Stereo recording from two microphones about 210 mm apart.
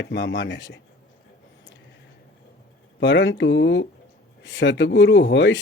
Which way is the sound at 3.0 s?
55° left (ahead or behind).